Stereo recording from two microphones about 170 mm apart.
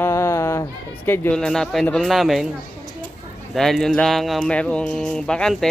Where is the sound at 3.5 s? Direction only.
Centre (ahead or behind).